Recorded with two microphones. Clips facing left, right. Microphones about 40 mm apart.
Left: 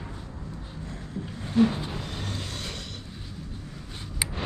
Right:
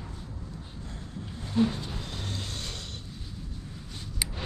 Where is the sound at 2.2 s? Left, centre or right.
Left.